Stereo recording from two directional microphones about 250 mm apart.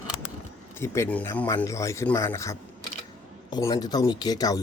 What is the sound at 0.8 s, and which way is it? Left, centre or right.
Speech, centre.